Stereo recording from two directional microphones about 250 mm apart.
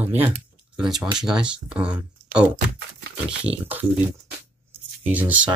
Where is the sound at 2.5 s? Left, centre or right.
Right.